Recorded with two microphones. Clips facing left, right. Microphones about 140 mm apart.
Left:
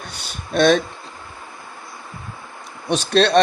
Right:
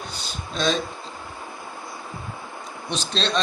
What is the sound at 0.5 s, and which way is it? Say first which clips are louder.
Speech: left 9 dB; 65° left (ahead or behind).